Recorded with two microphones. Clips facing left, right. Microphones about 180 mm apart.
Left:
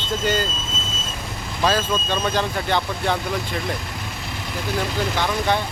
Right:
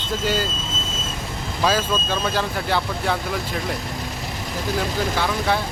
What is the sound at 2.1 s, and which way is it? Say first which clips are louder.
Speech: left 1 dB; 5° right (ahead or behind).